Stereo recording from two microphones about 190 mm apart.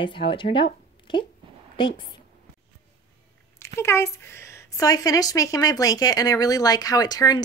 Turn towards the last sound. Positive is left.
turn(degrees=20)  # may be behind; listen again after turning